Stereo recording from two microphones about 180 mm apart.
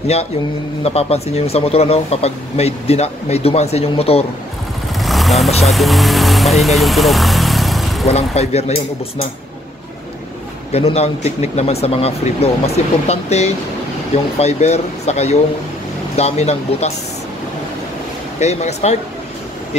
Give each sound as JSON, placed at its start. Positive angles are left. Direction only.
{"t": 0.8, "sound": "speech", "side_deg": 35}
{"t": 5.0, "sound": "vehicle", "side_deg": 0}
{"t": 5.7, "sound": "speech", "side_deg": 0}
{"t": 8.1, "sound": "speech", "side_deg": 35}
{"t": 10.7, "sound": "speech", "side_deg": 35}
{"t": 18.4, "sound": "speech", "side_deg": 40}